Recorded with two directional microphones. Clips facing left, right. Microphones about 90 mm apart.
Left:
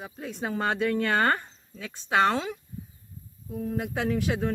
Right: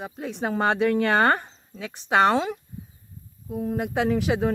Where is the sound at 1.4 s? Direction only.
10° right (ahead or behind).